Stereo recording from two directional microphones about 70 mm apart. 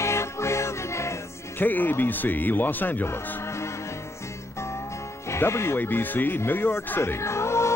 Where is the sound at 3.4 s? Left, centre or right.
Left.